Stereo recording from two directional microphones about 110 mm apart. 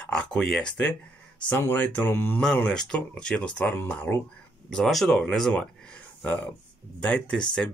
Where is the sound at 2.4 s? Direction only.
10° left (ahead or behind).